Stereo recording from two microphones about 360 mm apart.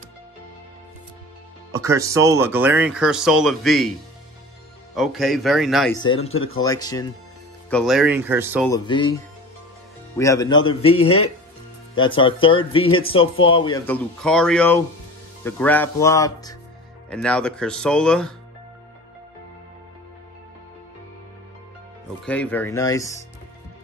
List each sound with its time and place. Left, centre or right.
1.7 s speech: centre
4.9 s speech: centre
5.9 s speech: centre
7.7 s speech: centre
8.6 s speech: centre
10.1 s speech: centre
11.0 s speech: left
11.9 s speech: centre
22.2 s speech: centre